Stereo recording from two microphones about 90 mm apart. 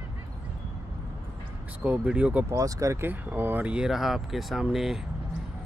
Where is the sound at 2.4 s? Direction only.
40° right (ahead or behind).